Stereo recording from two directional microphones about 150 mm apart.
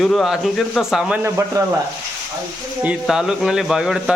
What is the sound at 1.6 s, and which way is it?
Sizzle, 25° right (ahead or behind).